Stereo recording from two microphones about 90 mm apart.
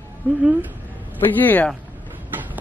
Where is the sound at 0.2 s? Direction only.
15° left (ahead or behind).